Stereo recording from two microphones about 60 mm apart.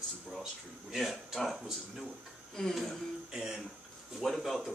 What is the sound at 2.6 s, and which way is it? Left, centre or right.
Speech, centre.